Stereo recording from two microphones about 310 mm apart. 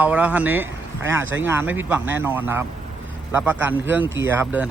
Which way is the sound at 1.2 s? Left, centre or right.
Right.